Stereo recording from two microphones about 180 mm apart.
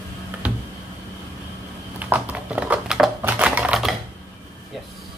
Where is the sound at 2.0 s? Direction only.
10° right (ahead or behind).